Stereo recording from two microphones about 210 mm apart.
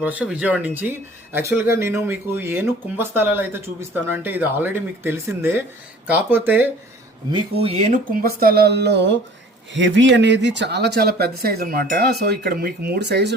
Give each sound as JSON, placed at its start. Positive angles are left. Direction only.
{"t": 0.0, "sound": "speech", "side_deg": -5}
{"t": 7.3, "sound": "speech", "side_deg": -30}